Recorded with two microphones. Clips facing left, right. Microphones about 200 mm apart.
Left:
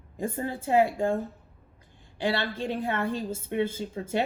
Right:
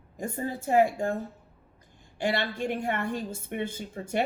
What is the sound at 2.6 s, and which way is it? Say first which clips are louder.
Speech: left 1 dB; 15° right (ahead or behind).